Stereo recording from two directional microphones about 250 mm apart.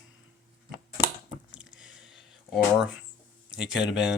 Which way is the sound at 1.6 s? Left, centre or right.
Centre.